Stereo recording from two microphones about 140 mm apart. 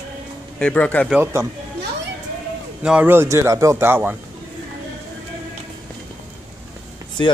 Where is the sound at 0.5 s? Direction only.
10° left (ahead or behind).